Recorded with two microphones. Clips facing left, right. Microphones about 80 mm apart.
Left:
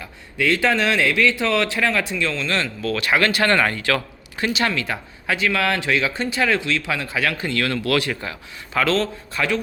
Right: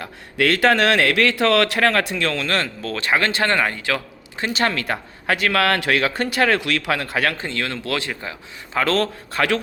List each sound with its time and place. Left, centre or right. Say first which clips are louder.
0.0 s speech: right 2 dB; right
2.8 s speech: left 4 dB; right
4.5 s speech: right 4 dB; right
7.3 s speech: left 3 dB; right
8.8 s speech: even; right